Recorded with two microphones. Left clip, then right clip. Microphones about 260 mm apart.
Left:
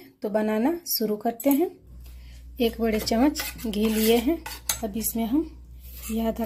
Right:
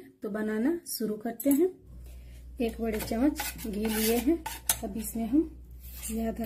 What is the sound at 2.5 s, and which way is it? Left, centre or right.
Speech, left.